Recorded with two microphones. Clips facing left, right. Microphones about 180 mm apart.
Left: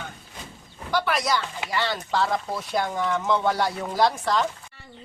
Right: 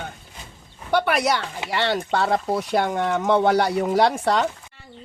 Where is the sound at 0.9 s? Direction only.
65° right (ahead or behind).